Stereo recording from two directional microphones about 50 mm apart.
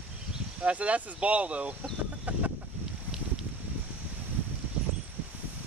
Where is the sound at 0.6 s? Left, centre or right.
Right.